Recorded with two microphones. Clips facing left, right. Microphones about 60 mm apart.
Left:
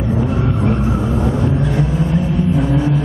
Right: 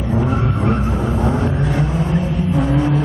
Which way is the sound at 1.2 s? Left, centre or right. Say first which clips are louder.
Left 1 dB; right.